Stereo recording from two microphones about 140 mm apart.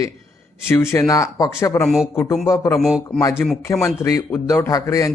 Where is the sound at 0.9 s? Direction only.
25° left (ahead or behind).